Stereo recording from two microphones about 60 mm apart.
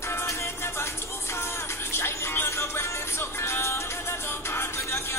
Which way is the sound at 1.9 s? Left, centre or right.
Left.